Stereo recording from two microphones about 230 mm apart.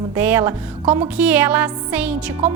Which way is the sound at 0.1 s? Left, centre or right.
Centre.